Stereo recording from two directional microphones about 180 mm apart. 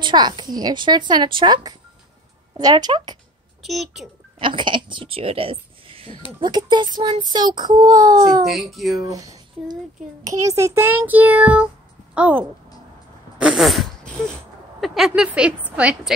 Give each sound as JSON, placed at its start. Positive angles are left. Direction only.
{"t": 0.0, "sound": "child singing", "side_deg": -25}
{"t": 3.6, "sound": "speech", "side_deg": 0}
{"t": 4.4, "sound": "speech", "side_deg": -25}
{"t": 6.4, "sound": "child singing", "side_deg": -25}
{"t": 8.5, "sound": "speech", "side_deg": 0}
{"t": 9.0, "sound": "a child's voice", "side_deg": -20}
{"t": 13.4, "sound": "a sound", "side_deg": -5}
{"t": 14.8, "sound": "speech", "side_deg": 0}